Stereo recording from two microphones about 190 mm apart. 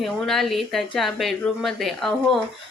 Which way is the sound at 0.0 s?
Centre (ahead or behind).